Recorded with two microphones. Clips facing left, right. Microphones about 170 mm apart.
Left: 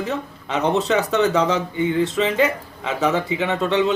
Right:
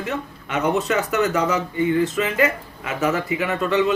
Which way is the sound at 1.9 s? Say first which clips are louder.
Left 3 dB; 25° left (ahead or behind).